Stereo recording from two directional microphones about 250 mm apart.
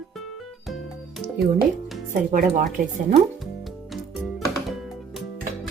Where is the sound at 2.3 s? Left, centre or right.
Right.